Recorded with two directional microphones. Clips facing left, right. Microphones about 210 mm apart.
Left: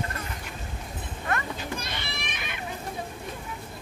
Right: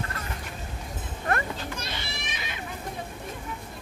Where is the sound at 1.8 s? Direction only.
55° left (ahead or behind).